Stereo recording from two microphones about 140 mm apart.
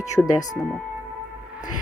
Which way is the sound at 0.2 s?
15° left (ahead or behind).